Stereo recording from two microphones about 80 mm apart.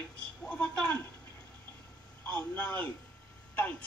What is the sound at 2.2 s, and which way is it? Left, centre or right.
Speech, left.